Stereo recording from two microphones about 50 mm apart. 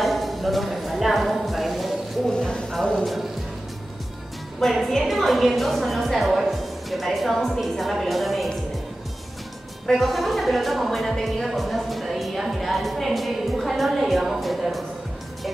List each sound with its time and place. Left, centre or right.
0.0 s a sound: centre
2.7 s music: centre
4.6 s a woman's voice: centre
9.8 s a woman's voice: centre